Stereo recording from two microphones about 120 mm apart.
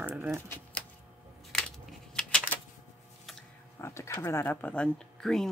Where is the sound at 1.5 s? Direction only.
5° left (ahead or behind).